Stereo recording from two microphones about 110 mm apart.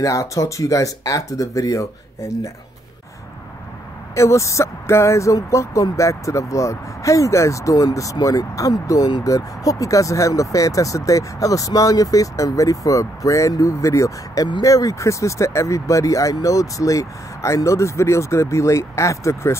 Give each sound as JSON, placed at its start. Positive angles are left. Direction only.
{"t": 0.0, "sound": "speech", "side_deg": 30}
{"t": 4.1, "sound": "speech", "side_deg": 25}